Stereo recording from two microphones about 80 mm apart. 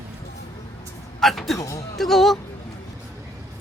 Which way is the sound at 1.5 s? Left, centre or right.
Left.